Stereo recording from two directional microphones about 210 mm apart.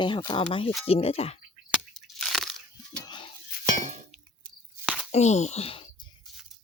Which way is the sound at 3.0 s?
20° left (ahead or behind).